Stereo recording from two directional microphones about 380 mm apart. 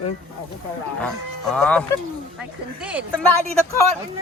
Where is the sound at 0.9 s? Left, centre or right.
Centre.